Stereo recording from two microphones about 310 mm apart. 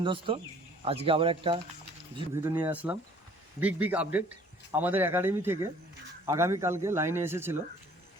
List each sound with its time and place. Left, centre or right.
0.0 s speech: centre